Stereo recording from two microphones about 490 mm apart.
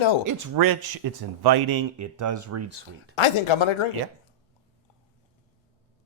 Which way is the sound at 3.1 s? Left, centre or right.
Left.